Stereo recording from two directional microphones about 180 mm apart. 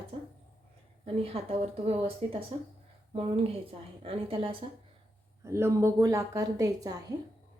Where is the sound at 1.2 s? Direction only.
35° right (ahead or behind).